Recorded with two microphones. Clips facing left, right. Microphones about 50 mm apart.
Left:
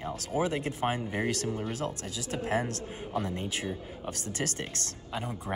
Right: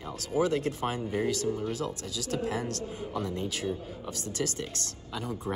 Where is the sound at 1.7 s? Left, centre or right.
Left.